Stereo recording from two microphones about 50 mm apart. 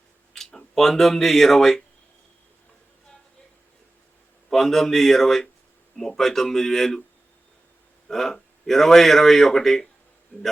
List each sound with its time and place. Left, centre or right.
0.3 s speech: centre
4.4 s a man's voice: centre
8.0 s a man's voice: centre
10.3 s a man's voice: left